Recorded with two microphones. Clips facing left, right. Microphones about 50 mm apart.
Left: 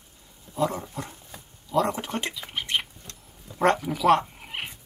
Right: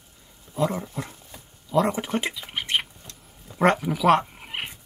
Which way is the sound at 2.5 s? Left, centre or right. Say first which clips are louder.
Right 1 dB; centre.